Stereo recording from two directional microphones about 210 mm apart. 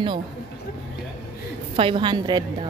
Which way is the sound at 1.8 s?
25° right (ahead or behind).